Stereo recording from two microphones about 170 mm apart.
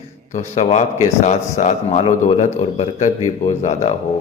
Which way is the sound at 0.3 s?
40° left (ahead or behind).